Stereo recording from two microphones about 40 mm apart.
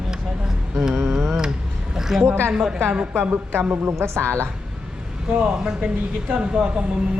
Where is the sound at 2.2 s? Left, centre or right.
Right.